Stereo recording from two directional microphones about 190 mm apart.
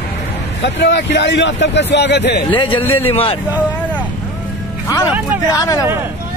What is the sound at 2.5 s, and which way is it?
Speech, 25° left (ahead or behind).